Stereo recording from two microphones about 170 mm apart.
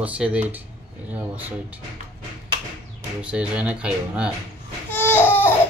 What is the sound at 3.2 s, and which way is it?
Speech, 5° right (ahead or behind).